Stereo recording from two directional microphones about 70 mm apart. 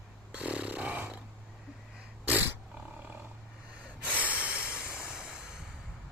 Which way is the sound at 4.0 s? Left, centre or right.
Right.